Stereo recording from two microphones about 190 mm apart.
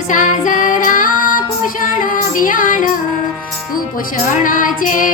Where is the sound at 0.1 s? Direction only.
40° left (ahead or behind).